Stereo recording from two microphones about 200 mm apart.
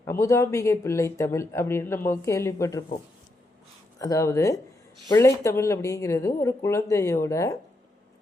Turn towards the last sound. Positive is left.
turn(degrees=15)  # may be behind; listen again after turning